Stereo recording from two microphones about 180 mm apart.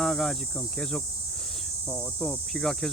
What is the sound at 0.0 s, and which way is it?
Speech, centre (ahead or behind).